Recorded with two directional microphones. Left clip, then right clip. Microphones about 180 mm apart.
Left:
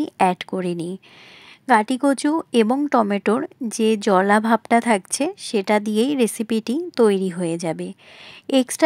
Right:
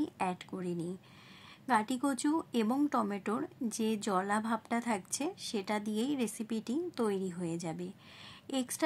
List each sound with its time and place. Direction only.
0.0 s speech: 50° left (ahead or behind)